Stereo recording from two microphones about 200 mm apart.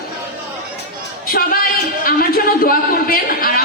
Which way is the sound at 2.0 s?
45° left (ahead or behind).